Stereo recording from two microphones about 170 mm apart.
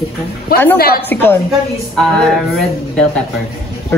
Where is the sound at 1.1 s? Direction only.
10° left (ahead or behind).